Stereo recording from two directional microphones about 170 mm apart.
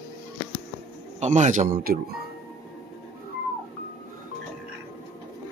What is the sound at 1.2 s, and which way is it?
Speech, 45° right (ahead or behind).